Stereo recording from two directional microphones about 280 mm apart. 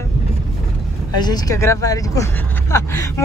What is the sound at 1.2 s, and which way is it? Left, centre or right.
Speech, centre.